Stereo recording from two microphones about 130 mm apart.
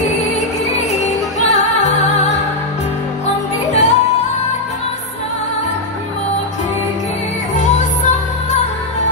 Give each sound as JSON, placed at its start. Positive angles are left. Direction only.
{"t": 0.7, "sound": "music", "side_deg": 65}
{"t": 3.7, "sound": "music", "side_deg": 60}